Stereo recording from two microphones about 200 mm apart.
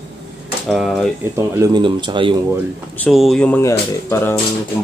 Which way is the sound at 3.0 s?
Centre (ahead or behind).